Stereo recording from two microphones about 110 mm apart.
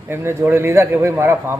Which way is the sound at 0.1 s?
20° right (ahead or behind).